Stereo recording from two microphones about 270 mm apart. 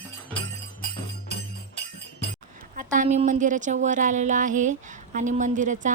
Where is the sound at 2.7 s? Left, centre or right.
Right.